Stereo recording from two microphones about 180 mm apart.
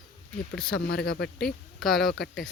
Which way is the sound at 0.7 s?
55° left (ahead or behind).